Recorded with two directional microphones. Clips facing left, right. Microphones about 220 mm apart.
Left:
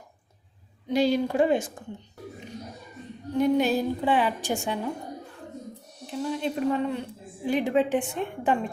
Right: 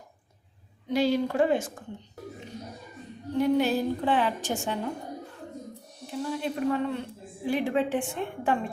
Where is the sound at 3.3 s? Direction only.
20° left (ahead or behind).